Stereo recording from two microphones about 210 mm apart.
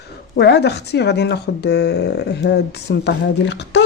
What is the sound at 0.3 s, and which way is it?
A woman's voice, 55° left (ahead or behind).